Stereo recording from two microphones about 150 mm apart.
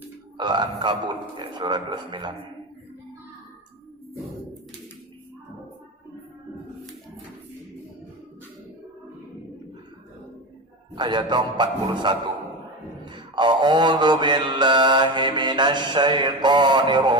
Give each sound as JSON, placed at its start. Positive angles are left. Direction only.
{"t": 0.3, "sound": "mantra", "side_deg": -30}
{"t": 10.9, "sound": "mantra", "side_deg": -30}